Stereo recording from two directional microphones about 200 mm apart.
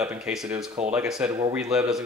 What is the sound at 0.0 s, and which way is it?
Speech, 5° right (ahead or behind).